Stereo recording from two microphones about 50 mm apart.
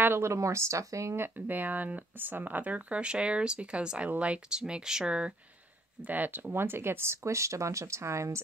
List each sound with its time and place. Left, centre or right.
0.2 s speech: right
1.3 s speech: right; by 5.3 s centre
6.0 s speech: right
6.5 s speech: right